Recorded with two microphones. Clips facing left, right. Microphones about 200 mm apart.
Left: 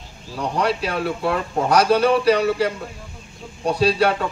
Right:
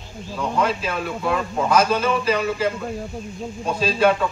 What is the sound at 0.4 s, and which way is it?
A man's voice, 70° left (ahead or behind).